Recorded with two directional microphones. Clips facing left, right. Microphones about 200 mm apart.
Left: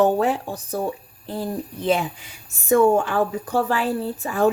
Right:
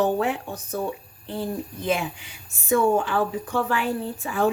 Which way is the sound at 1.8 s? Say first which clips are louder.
Left 4 dB; 40° left (ahead or behind).